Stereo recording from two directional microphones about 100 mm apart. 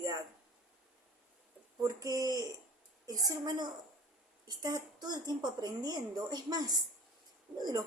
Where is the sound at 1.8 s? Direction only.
35° right (ahead or behind).